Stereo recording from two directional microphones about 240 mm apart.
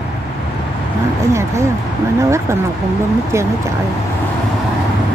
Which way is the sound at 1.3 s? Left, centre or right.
Centre.